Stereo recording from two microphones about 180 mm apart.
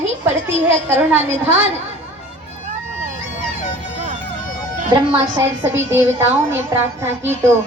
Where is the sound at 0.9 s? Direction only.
10° right (ahead or behind).